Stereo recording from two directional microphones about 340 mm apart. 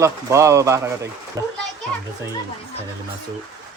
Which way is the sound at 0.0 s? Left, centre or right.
Centre.